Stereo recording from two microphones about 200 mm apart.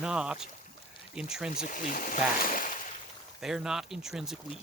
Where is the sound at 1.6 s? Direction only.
40° left (ahead or behind).